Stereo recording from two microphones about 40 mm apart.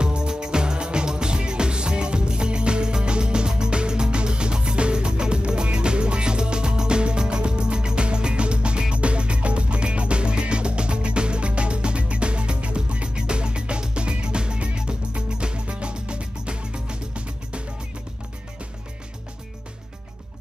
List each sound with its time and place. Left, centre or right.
0.0 s music: right